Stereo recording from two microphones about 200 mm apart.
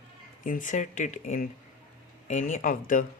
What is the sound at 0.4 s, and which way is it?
Speech, 40° left (ahead or behind).